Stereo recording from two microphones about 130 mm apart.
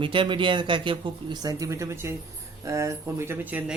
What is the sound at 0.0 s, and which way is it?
Speech, 40° right (ahead or behind).